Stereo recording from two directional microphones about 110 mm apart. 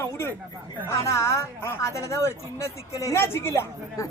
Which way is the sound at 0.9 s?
25° left (ahead or behind).